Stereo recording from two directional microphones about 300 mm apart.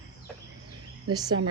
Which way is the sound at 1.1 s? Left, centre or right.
Centre.